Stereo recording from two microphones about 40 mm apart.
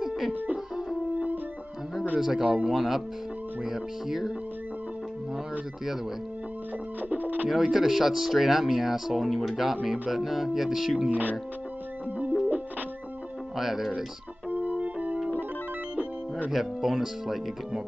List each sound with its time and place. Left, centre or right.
0.0 s music: centre
2.1 s speech: centre
2.7 s speech: centre
7.0 s speech: right
7.4 s speech: centre
11.1 s speech: right
13.6 s speech: centre
14.5 s organ: right
16.5 s speech: centre